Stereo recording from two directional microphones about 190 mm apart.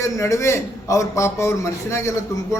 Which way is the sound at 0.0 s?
15° left (ahead or behind).